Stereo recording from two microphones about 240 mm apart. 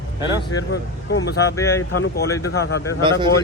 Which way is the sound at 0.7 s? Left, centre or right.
Left.